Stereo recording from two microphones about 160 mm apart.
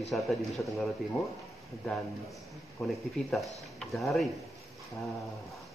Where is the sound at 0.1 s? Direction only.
Centre (ahead or behind).